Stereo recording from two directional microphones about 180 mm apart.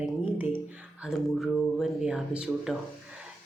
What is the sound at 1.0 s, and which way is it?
Speech, centre (ahead or behind).